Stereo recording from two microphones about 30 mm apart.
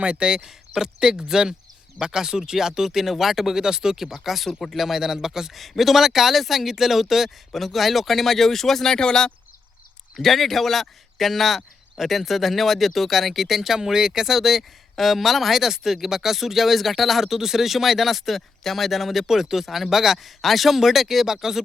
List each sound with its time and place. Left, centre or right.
0.0 s speech: right
0.4 s speech: centre
5.5 s speech: centre
9.0 s speech: left
10.2 s speech: centre
19.3 s speech: centre